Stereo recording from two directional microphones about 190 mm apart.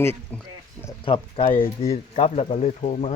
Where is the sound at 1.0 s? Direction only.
25° left (ahead or behind).